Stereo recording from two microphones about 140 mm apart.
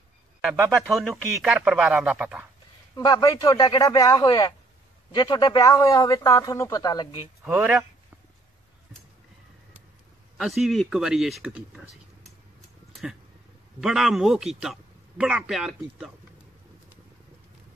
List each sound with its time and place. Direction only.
0.4 s a man's voice: 5° right (ahead or behind)
3.0 s speech: 30° left (ahead or behind)
7.4 s a man's voice: 10° right (ahead or behind)
10.3 s a man's voice: centre (ahead or behind)
13.7 s a man's voice: centre (ahead or behind)